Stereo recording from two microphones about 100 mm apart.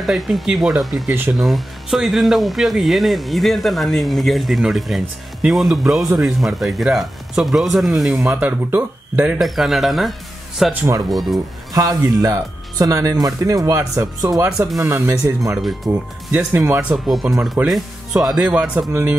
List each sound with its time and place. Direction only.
0.0 s speech: centre (ahead or behind)
8.2 s speech: 15° right (ahead or behind)
9.4 s speech: centre (ahead or behind)
10.7 s speech: 25° right (ahead or behind)
11.1 s speech: centre (ahead or behind)
11.7 s a man's voice: 35° right (ahead or behind)
15.9 s speech: 20° right (ahead or behind)
16.9 s speech: centre (ahead or behind)